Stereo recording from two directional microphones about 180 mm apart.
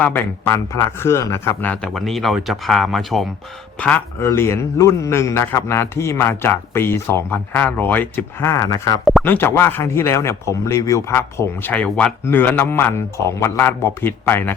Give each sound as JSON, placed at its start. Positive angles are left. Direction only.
{"t": 0.0, "sound": "a man's voice", "side_deg": 10}